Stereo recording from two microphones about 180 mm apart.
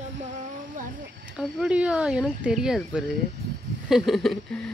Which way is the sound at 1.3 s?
5° right (ahead or behind).